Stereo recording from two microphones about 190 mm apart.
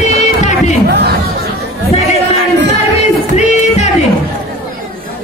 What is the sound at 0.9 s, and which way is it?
Speech, 55° right (ahead or behind).